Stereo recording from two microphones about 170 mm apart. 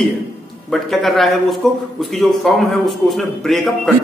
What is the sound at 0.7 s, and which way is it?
A man's voice, centre (ahead or behind).